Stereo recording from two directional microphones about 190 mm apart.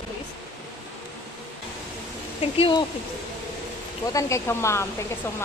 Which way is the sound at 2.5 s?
25° left (ahead or behind).